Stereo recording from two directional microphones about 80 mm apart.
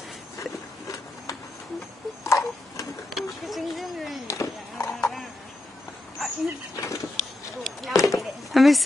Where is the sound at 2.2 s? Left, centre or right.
Left.